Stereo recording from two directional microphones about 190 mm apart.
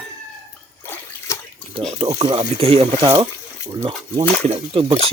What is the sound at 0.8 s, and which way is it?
Water, 10° left (ahead or behind).